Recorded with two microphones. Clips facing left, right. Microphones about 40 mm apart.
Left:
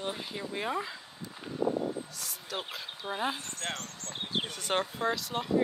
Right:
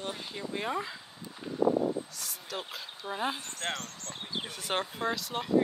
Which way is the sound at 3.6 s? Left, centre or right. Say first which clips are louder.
Right 2 dB; right.